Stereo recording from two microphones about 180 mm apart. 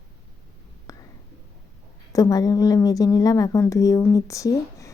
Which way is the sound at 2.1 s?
20° left (ahead or behind).